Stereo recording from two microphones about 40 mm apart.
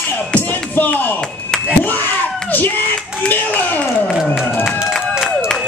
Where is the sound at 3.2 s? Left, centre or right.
Left.